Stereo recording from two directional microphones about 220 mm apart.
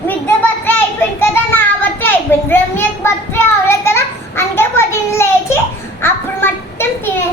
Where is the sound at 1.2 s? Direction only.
10° left (ahead or behind).